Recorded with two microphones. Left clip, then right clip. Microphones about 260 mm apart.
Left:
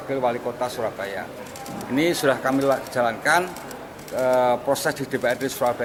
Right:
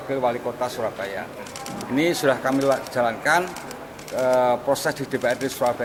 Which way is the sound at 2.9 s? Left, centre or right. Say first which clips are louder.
Even; centre.